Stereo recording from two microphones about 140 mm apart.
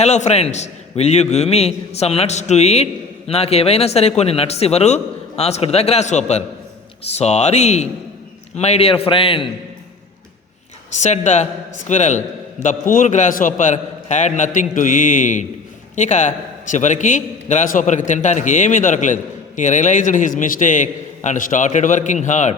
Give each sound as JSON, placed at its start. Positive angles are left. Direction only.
{"t": 0.0, "sound": "a man's voice", "side_deg": 55}
{"t": 10.9, "sound": "a man's voice", "side_deg": 55}
{"t": 12.6, "sound": "a man's voice", "side_deg": 70}